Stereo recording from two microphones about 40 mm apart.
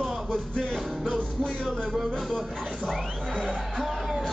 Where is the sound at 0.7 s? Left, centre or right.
Centre.